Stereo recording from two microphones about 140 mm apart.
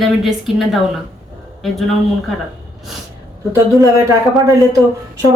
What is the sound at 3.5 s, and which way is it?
Speech, 25° right (ahead or behind).